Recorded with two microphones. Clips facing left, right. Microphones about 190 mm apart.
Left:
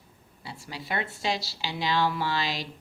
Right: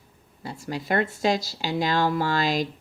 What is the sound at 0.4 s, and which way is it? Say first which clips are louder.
A woman's voice: right 8 dB; 45° right (ahead or behind).